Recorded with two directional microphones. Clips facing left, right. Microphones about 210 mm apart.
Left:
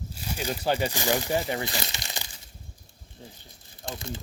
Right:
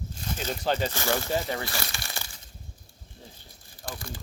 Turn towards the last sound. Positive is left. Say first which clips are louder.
# left 3 dB
turn(degrees=20)  # may be behind; listen again after turning